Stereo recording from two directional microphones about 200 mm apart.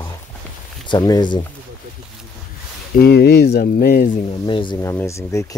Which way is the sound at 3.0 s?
55° left (ahead or behind).